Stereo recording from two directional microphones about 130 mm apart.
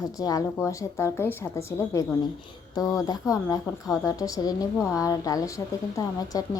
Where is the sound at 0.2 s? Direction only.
30° left (ahead or behind).